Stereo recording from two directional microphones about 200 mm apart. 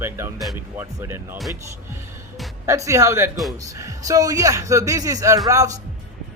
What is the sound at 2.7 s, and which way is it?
Speech, 15° right (ahead or behind).